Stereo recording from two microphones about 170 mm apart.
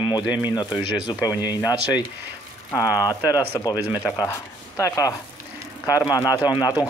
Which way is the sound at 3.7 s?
10° right (ahead or behind).